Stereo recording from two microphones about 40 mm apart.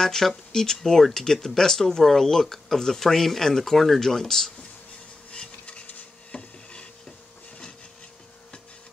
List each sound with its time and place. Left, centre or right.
0.0 s speech: centre
5.3 s stir: left
6.3 s wood: left